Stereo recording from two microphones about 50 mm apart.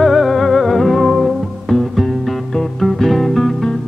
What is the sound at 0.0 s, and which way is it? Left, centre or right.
Music, centre.